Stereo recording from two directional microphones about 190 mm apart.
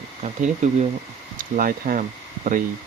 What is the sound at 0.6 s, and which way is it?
Speech, 40° right (ahead or behind).